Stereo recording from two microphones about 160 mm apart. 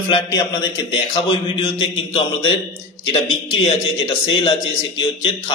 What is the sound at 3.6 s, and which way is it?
Speech, 35° left (ahead or behind).